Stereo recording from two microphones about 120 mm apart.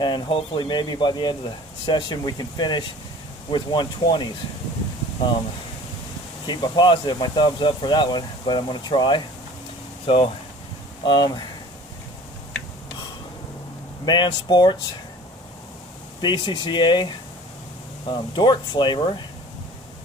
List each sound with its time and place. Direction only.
0.0 s speech: 40° left (ahead or behind)
6.4 s speech: 35° left (ahead or behind)
14.0 s speech: 40° left (ahead or behind)
16.2 s speech: 40° left (ahead or behind)